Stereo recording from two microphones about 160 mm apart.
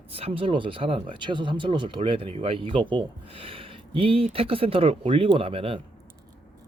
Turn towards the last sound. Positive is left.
turn(degrees=-35)  # may be behind; listen again after turning